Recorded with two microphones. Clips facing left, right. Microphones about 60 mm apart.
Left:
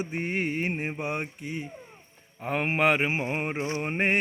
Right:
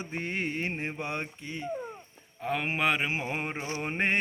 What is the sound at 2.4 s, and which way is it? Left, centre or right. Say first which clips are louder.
Mantra: left 4 dB; left.